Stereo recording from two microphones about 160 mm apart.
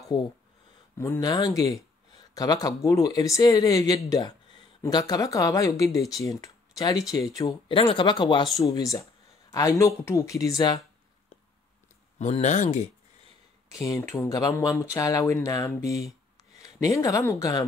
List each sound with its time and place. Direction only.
0.1 s speech: 30° left (ahead or behind)
0.9 s speech: 15° left (ahead or behind)
7.6 s speech: 35° left (ahead or behind)
12.2 s speech: 45° left (ahead or behind)
13.7 s speech: 20° left (ahead or behind)